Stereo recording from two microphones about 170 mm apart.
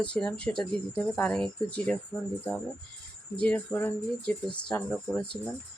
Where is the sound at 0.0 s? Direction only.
5° left (ahead or behind).